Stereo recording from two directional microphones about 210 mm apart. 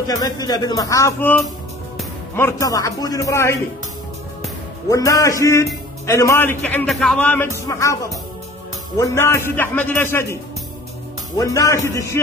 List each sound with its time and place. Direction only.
0.1 s a man's voice: 20° left (ahead or behind)
2.3 s a man's voice: 15° left (ahead or behind)
4.8 s a man's voice: 15° left (ahead or behind)
11.3 s a man's voice: 15° left (ahead or behind)